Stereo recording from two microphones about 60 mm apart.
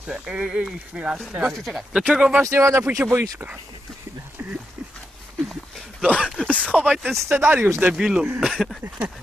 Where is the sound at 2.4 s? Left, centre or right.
Right.